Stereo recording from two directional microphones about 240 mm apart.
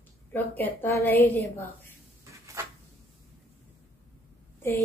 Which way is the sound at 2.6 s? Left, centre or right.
Centre.